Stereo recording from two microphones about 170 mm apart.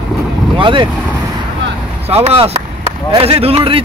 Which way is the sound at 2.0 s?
35° right (ahead or behind).